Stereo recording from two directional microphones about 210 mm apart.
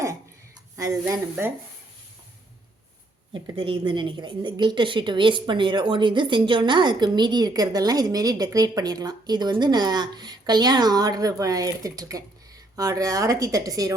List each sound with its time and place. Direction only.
0.8 s speech: 15° right (ahead or behind)
3.3 s a woman's voice: 25° right (ahead or behind)